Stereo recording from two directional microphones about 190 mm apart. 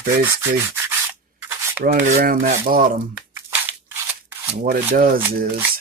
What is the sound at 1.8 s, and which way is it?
Speech, 50° right (ahead or behind).